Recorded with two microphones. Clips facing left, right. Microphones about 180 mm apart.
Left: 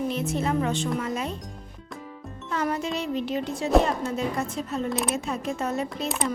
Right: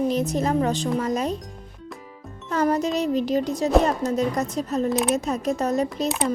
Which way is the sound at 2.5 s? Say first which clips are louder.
Right 6 dB; 40° right (ahead or behind).